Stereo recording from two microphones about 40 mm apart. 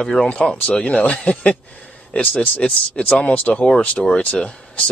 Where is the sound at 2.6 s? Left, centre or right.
Left.